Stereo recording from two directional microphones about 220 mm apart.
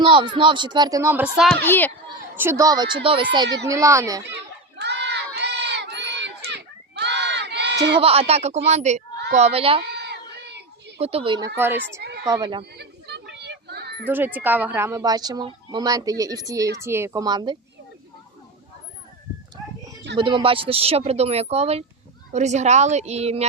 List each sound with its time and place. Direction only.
0.0 s speech: 20° right (ahead or behind); by 1.5 s 5° right (ahead or behind)
1.6 s a child's voice: 10° left (ahead or behind)
2.3 s speech: 10° right (ahead or behind)
4.3 s crowd: 50° right (ahead or behind)
7.9 s speech: 25° right (ahead or behind)
9.8 s a sound: 50° right (ahead or behind)
11.0 s speech: 25° right (ahead or behind); by 11.8 s 10° right (ahead or behind)
12.3 s speech: 20° right (ahead or behind)
12.7 s a sound: 50° right (ahead or behind)
14.1 s speech: 10° right (ahead or behind)
20.1 s a woman's voice: 20° right (ahead or behind)